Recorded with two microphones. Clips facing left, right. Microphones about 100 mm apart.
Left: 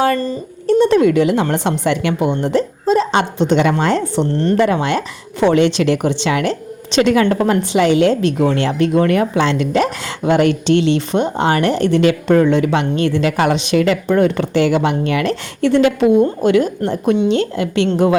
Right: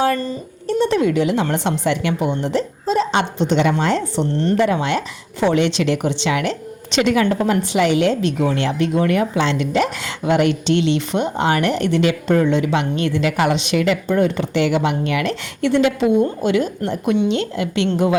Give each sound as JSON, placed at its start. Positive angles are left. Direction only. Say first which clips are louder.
{"t": 0.9, "sound": "a woman's voice", "louder": "left 5 dB", "side_deg": 60}
{"t": 1.8, "sound": "a woman's voice", "louder": "left 3 dB", "side_deg": 65}
{"t": 5.4, "sound": "a woman's voice", "louder": "left 4 dB", "side_deg": 60}
{"t": 7.3, "sound": "speech", "louder": "left 3 dB", "side_deg": 60}
{"t": 7.7, "sound": "speech", "louder": "left 4 dB", "side_deg": 30}
{"t": 12.3, "sound": "a woman's voice", "louder": "left 4 dB", "side_deg": 60}
{"t": 12.7, "sound": "speech", "louder": "left 3 dB", "side_deg": 35}
{"t": 14.1, "sound": "speech", "louder": "left 4 dB", "side_deg": 60}
{"t": 14.5, "sound": "a woman's voice", "louder": "left 3 dB", "side_deg": 40}
{"t": 16.8, "sound": "speech", "louder": "left 3 dB", "side_deg": 35}